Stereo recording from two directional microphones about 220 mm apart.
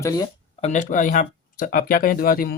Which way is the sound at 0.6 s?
30° left (ahead or behind).